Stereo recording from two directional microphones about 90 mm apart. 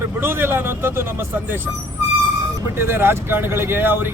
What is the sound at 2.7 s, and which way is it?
Speech, 25° right (ahead or behind).